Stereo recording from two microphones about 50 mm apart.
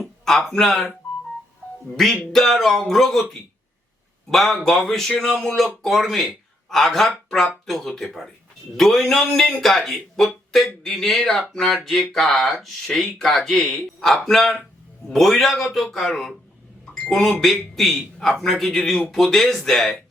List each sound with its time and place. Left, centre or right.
0.0 s speech: centre
2.3 s a man's voice: centre
16.9 s a sound: centre
17.4 s a man's voice: centre